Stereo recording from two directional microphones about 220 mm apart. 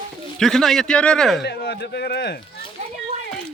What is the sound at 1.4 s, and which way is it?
Speech, 50° left (ahead or behind).